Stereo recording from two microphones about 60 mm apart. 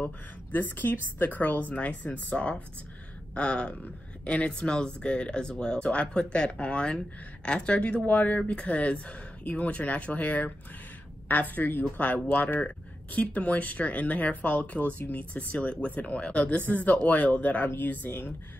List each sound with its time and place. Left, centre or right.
0.0 s a woman's voice: left